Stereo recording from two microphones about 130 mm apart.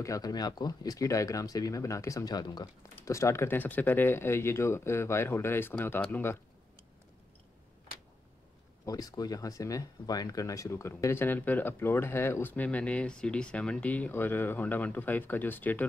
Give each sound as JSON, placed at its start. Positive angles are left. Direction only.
{"t": 0.0, "sound": "speech", "side_deg": 25}
{"t": 8.8, "sound": "speech", "side_deg": 30}